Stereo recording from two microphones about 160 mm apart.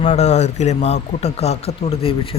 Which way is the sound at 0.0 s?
45° left (ahead or behind).